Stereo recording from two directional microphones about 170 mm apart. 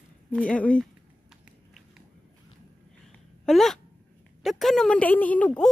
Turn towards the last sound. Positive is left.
turn(degrees=5)  # may be behind; listen again after turning